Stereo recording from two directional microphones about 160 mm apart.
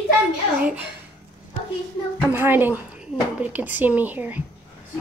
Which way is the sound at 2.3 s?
15° right (ahead or behind).